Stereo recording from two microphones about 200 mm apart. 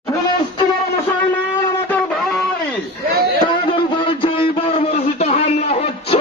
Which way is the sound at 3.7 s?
25° left (ahead or behind).